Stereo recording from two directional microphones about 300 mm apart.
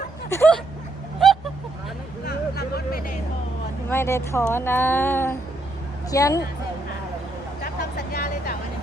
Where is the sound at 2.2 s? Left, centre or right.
Left.